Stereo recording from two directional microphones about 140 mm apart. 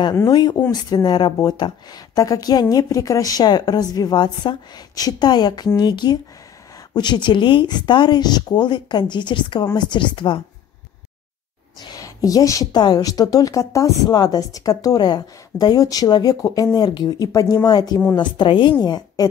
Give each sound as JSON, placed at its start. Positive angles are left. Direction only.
{"t": 0.0, "sound": "a woman's voice", "side_deg": 25}
{"t": 11.9, "sound": "a woman's voice", "side_deg": 25}